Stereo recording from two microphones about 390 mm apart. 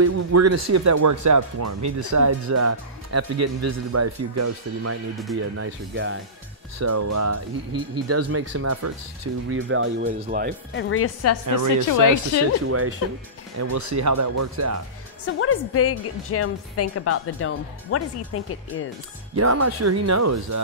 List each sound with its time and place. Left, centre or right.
0.0 s speech: right
6.8 s speech: right
9.7 s speech: right
10.7 s a woman's voice: left
11.4 s speech: right
11.9 s a woman's voice: left
12.6 s speech: right
13.6 s speech: right
15.2 s a woman's voice: left
19.3 s speech: right